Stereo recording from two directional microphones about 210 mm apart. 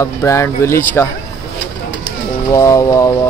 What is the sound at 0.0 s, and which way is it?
Speech, 15° left (ahead or behind).